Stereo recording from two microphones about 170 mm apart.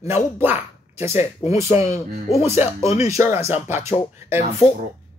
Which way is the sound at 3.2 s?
40° left (ahead or behind).